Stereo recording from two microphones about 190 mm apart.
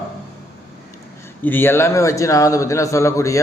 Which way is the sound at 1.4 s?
10° left (ahead or behind).